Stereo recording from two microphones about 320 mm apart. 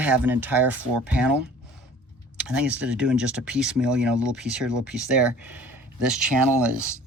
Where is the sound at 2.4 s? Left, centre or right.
Centre.